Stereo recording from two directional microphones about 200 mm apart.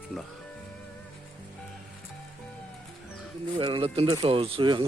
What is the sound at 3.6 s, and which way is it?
Speech, 25° right (ahead or behind).